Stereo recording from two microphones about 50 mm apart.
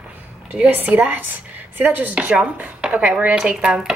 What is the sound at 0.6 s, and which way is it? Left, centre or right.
A woman's voice, right.